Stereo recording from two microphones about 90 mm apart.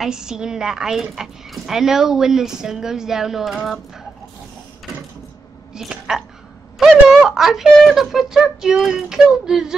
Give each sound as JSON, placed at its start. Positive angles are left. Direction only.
{"t": 0.0, "sound": "speech", "side_deg": -5}
{"t": 5.8, "sound": "speech", "side_deg": -5}